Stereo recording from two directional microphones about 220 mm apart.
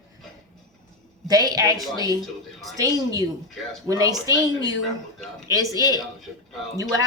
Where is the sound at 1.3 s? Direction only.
15° right (ahead or behind).